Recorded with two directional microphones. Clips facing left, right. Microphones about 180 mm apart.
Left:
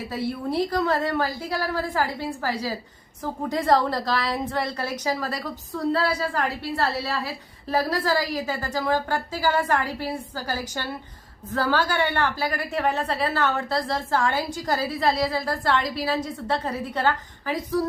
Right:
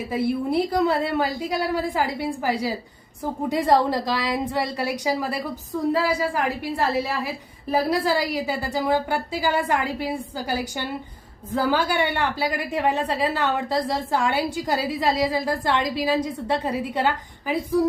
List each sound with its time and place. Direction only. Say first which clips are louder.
0.7 s a woman's voice: right 2 dB; 15° right (ahead or behind)